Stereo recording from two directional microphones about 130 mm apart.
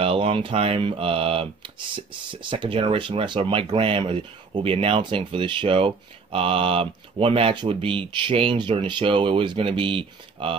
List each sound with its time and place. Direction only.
0.0 s speech: 45° right (ahead or behind)